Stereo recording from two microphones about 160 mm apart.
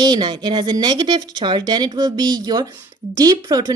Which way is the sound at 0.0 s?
25° right (ahead or behind).